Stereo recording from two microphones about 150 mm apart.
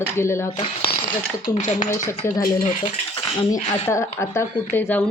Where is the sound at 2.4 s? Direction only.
70° left (ahead or behind).